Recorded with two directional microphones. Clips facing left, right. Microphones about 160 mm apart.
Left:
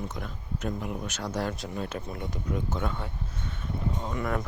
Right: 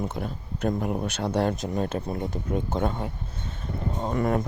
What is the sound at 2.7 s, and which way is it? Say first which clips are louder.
Speech: right 5 dB; 40° right (ahead or behind).